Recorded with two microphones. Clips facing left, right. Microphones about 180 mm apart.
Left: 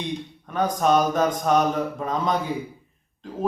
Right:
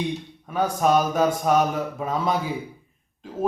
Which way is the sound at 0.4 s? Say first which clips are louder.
Even; 10° right (ahead or behind).